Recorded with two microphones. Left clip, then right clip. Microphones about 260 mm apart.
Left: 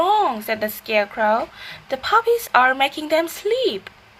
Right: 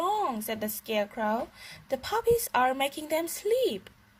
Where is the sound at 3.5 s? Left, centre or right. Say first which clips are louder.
Left 4 dB; right.